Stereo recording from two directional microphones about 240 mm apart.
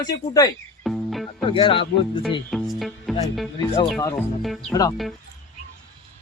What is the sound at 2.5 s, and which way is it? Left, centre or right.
Music, centre.